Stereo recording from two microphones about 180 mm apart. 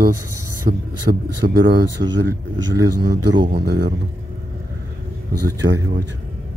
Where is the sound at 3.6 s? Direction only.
70° right (ahead or behind).